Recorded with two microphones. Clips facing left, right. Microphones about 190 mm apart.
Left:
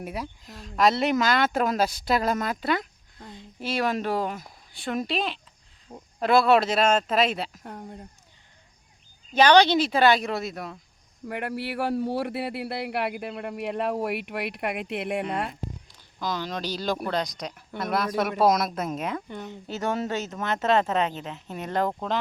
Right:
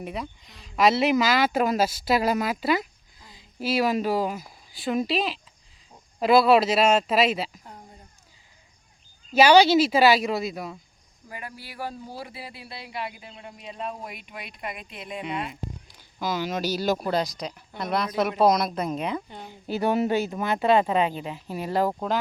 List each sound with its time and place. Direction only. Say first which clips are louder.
0.0 s speech: even; 5° left (ahead or behind)
7.6 s speech: left 7 dB; 65° left (ahead or behind)
9.3 s speech: right 2 dB; 5° right (ahead or behind)
11.3 s speech: left 10 dB; 70° left (ahead or behind)
16.1 s speech: right 3 dB; 5° right (ahead or behind)
19.6 s speech: right 5 dB; 10° right (ahead or behind)